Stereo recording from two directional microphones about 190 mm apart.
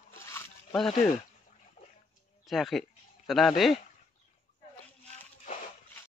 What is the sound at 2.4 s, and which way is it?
Speech, centre (ahead or behind).